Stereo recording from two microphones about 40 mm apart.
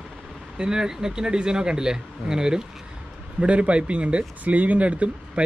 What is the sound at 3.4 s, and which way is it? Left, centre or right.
Speech, right.